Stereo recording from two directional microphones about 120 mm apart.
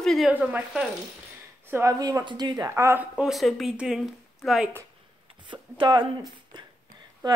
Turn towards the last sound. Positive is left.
turn(degrees=-35)  # may be behind; listen again after turning